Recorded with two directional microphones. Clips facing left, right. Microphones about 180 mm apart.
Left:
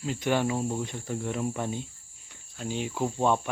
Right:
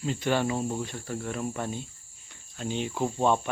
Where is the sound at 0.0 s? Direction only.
10° left (ahead or behind).